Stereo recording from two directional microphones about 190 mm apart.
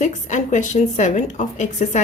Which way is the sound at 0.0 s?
40° left (ahead or behind).